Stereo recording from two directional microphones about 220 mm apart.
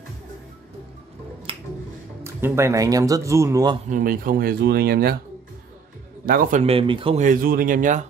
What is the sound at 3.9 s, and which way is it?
Speech, 40° right (ahead or behind).